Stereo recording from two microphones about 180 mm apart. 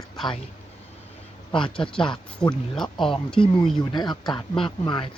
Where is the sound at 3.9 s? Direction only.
25° left (ahead or behind).